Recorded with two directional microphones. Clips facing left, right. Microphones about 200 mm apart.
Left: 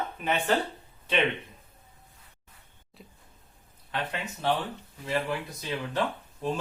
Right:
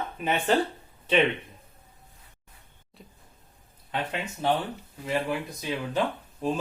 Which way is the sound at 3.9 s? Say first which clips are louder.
Right 2 dB; 15° right (ahead or behind).